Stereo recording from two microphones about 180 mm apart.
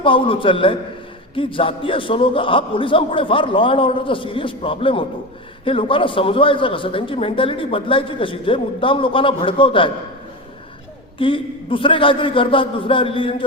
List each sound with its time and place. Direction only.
0.0 s a man's voice: 30° left (ahead or behind)
11.2 s a man's voice: 30° left (ahead or behind)